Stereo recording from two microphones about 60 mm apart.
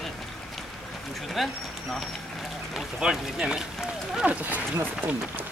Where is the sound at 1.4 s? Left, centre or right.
Centre.